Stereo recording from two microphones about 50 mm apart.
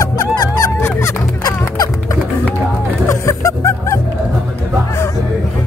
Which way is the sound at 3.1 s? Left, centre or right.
Left.